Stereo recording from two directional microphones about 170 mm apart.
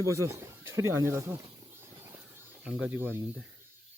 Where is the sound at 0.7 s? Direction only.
15° right (ahead or behind).